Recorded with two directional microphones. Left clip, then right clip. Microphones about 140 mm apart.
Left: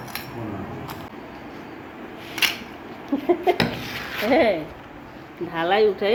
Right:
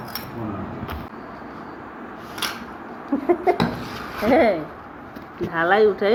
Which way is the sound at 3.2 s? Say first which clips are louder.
Right 1 dB; 5° left (ahead or behind).